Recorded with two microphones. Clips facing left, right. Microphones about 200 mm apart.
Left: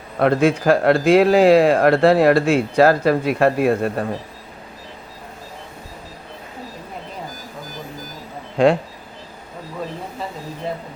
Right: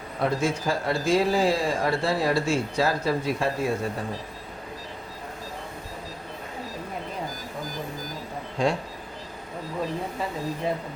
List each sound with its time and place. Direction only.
0.2 s speech: 65° left (ahead or behind)
8.5 s speech: 65° left (ahead or behind)